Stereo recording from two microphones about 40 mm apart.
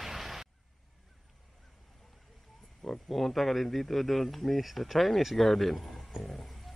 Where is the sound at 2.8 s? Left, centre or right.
Centre.